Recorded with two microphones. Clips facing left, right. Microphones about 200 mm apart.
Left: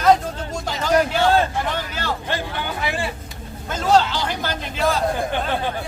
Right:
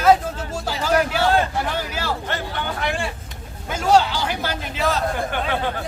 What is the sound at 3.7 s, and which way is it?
A man's voice, 10° right (ahead or behind).